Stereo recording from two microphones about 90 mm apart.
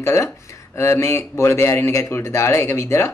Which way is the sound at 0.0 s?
30° left (ahead or behind).